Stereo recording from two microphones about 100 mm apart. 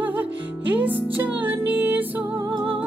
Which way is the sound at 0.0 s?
15° right (ahead or behind).